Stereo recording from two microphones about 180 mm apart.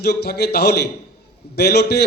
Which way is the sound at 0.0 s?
65° left (ahead or behind).